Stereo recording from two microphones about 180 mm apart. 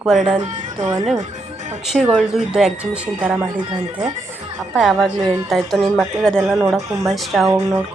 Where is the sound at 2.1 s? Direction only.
5° right (ahead or behind).